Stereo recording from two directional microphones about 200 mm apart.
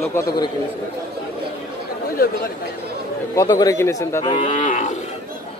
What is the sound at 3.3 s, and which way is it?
Speech, 20° left (ahead or behind).